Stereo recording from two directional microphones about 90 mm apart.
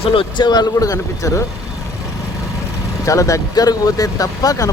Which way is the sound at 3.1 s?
35° left (ahead or behind).